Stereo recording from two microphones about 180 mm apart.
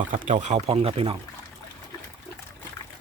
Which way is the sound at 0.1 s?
40° right (ahead or behind).